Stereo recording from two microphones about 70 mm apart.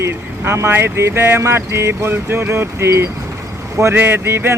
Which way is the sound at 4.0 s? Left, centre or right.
Right.